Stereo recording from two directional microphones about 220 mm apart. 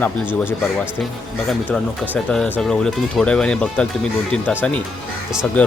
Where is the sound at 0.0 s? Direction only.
10° left (ahead or behind).